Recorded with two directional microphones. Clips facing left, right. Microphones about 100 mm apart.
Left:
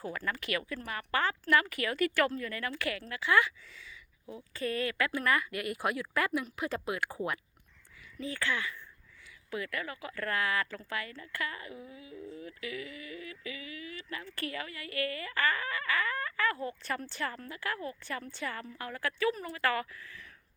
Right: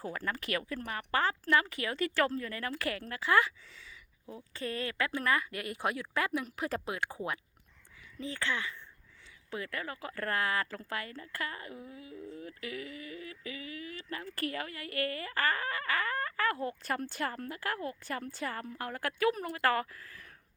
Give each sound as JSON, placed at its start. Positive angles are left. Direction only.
{"t": 0.0, "sound": "speech", "side_deg": -35}
{"t": 6.4, "sound": "speech", "side_deg": -40}
{"t": 8.2, "sound": "speech", "side_deg": -25}